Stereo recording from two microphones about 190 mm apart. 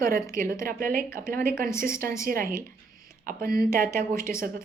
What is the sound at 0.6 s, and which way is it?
A woman's voice, 45° right (ahead or behind).